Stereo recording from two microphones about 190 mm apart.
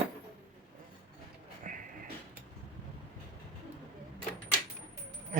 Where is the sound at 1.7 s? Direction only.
45° right (ahead or behind).